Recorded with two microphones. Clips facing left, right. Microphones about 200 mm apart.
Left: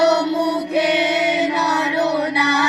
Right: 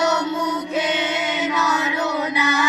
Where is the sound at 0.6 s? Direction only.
65° left (ahead or behind).